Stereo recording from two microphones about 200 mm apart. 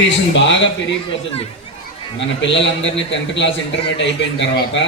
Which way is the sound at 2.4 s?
65° left (ahead or behind).